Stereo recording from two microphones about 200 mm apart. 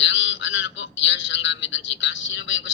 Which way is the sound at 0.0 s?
65° left (ahead or behind).